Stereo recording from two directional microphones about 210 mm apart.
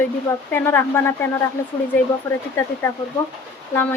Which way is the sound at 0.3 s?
10° left (ahead or behind).